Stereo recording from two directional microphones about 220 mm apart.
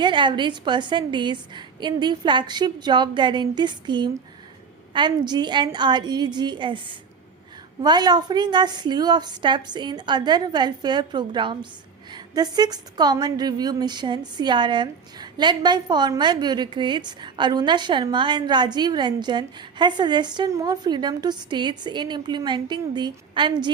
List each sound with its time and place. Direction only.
0.0 s speech: 20° right (ahead or behind)